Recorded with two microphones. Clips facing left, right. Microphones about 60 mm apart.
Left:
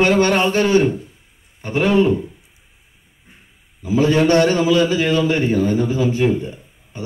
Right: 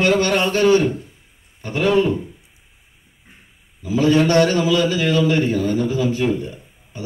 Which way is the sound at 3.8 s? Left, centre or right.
Left.